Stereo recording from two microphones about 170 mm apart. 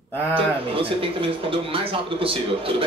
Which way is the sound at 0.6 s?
30° right (ahead or behind).